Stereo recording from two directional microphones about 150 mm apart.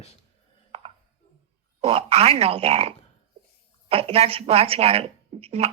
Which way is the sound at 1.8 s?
40° right (ahead or behind).